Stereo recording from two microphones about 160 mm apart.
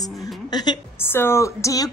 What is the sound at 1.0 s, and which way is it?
Speech, 15° left (ahead or behind).